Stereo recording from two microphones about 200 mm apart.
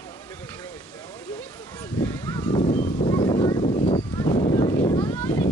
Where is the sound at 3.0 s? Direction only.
20° left (ahead or behind).